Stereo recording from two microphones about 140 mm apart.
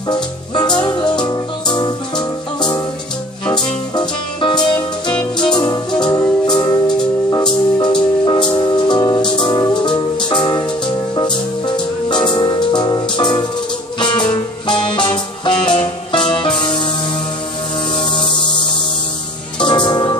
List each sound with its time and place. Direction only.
0.1 s music: 30° left (ahead or behind)
17.9 s music: 35° left (ahead or behind)
19.6 s music: 35° left (ahead or behind)